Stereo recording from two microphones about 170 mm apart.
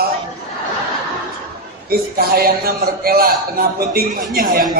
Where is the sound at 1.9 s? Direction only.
65° right (ahead or behind).